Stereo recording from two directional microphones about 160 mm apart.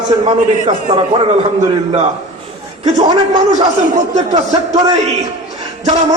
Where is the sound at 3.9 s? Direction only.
45° right (ahead or behind).